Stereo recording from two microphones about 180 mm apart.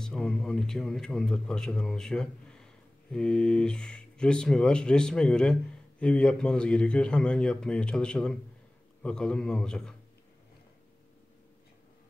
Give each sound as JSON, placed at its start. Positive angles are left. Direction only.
{"t": 0.0, "sound": "a man's voice", "side_deg": 5}